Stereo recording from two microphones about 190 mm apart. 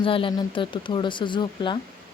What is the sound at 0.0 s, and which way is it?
Speech, 25° left (ahead or behind).